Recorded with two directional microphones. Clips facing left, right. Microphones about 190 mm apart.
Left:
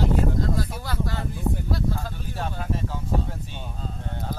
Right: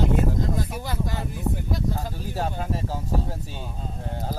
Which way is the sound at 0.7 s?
15° right (ahead or behind).